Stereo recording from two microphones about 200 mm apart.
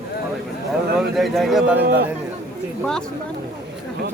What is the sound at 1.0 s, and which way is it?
Speech, centre (ahead or behind).